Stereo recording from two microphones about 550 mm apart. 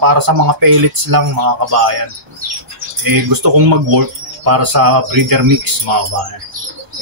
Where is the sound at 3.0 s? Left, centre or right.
Right.